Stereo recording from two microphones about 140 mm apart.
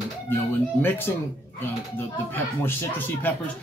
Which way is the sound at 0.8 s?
15° left (ahead or behind).